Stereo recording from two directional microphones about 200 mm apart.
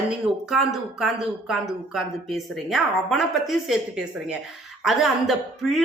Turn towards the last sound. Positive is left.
turn(degrees=0)  # may be behind; listen again after turning